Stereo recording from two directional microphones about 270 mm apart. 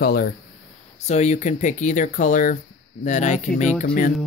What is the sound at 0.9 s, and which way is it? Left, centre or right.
Speech, left.